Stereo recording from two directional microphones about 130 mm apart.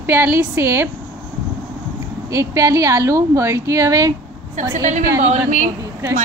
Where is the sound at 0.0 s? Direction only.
15° right (ahead or behind).